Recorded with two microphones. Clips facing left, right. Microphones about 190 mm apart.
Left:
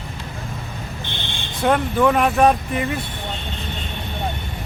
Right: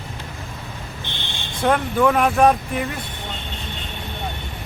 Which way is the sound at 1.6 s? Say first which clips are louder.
Left 1 dB; centre (ahead or behind).